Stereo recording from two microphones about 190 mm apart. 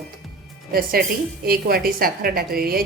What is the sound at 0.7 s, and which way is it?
A woman's voice, 50° right (ahead or behind).